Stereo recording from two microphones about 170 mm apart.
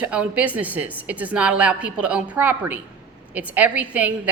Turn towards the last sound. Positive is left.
turn(degrees=-10)  # may be behind; listen again after turning